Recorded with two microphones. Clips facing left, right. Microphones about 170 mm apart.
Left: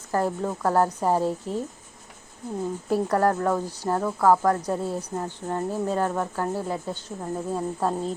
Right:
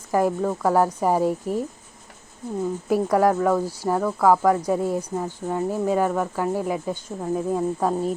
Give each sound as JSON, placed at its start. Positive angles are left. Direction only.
{"t": 0.1, "sound": "speech", "side_deg": -10}
{"t": 2.9, "sound": "speech", "side_deg": -10}